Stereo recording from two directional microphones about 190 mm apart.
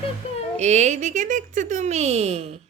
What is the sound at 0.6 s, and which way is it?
Speech, 35° right (ahead or behind).